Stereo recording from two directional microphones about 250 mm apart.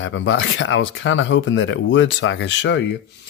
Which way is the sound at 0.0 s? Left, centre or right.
Left.